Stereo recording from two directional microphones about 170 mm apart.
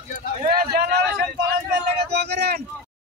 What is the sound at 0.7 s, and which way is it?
Speech, 60° right (ahead or behind).